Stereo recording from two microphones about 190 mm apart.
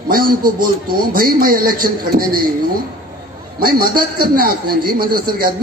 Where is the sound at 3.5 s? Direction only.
50° right (ahead or behind).